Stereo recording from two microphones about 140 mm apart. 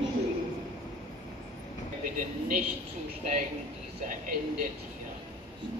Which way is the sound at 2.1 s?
65° right (ahead or behind).